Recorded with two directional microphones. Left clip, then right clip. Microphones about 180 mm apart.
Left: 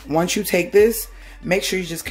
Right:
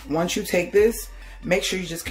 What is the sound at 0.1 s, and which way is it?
Speech, 35° left (ahead or behind).